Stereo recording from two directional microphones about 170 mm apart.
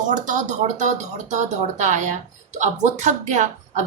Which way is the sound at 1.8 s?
45° right (ahead or behind).